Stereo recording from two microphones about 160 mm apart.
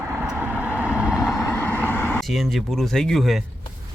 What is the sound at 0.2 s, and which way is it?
Vehicle, 10° right (ahead or behind).